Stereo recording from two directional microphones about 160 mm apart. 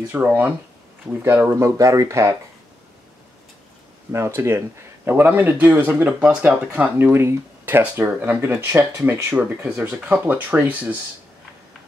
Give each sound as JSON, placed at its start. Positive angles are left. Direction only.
{"t": 0.1, "sound": "speech", "side_deg": -10}
{"t": 4.1, "sound": "speech", "side_deg": -15}